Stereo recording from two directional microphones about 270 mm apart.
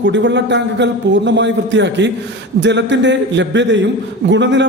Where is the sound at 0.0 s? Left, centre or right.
Right.